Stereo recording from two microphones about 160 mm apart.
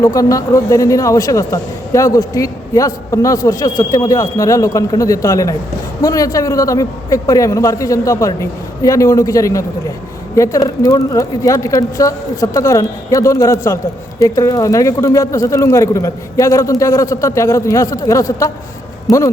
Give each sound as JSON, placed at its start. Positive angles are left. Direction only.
{"t": 0.0, "sound": "a man's voice", "side_deg": 20}